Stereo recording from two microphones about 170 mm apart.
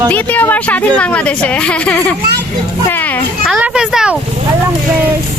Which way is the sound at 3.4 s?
5° right (ahead or behind).